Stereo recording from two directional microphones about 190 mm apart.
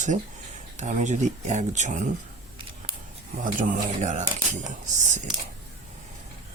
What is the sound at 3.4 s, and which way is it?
Speech, 40° right (ahead or behind).